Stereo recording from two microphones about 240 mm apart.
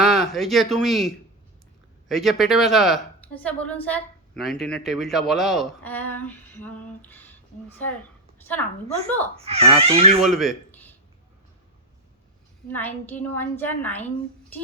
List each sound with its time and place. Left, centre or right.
0.0 s a woman's voice: centre
9.4 s speech: right
10.2 s speech: centre
12.6 s a woman's voice: centre